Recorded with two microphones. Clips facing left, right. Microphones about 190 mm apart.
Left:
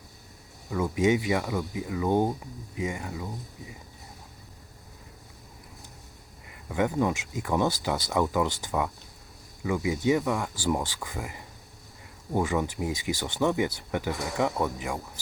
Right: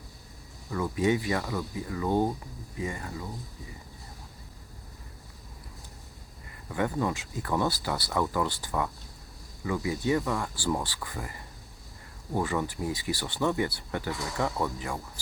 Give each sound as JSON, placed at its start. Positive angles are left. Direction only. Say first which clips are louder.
{"t": 0.9, "sound": "speech", "louder": "left 2 dB", "side_deg": 20}
{"t": 6.7, "sound": "speech", "louder": "left 3 dB", "side_deg": 15}